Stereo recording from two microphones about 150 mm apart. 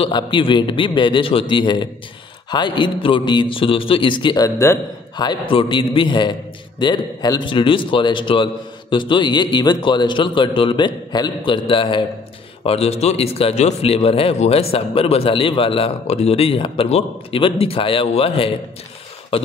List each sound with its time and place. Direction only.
0.0 s speech: 35° left (ahead or behind)